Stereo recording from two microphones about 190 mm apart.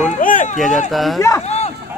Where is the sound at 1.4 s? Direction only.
35° left (ahead or behind).